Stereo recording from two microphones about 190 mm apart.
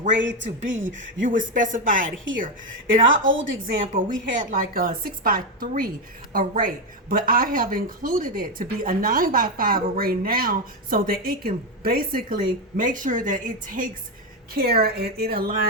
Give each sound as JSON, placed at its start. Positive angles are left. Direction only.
{"t": 0.2, "sound": "speech", "side_deg": -70}
{"t": 0.9, "sound": "speech", "side_deg": -45}
{"t": 3.1, "sound": "a woman's voice", "side_deg": -90}
{"t": 3.9, "sound": "speech", "side_deg": -45}